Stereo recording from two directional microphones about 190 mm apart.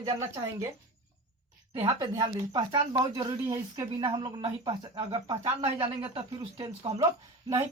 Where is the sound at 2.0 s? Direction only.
20° right (ahead or behind).